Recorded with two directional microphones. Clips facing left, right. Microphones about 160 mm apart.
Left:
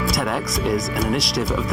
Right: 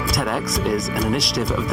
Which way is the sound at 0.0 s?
Centre (ahead or behind).